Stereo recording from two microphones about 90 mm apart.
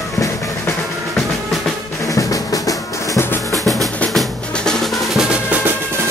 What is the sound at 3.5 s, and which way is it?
Drum, centre (ahead or behind).